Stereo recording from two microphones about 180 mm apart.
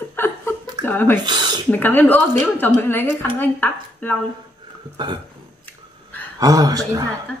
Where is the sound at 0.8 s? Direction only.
10° left (ahead or behind).